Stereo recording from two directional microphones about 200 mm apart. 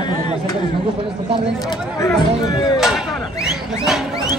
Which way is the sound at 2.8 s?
Centre (ahead or behind).